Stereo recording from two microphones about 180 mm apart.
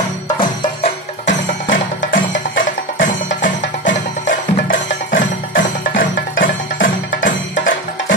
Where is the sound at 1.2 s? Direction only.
45° left (ahead or behind).